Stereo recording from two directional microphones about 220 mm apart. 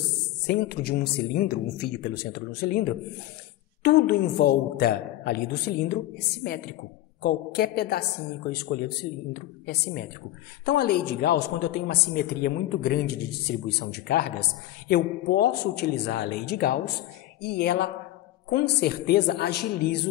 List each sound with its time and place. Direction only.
0.5 s a woman's voice: 45° left (ahead or behind)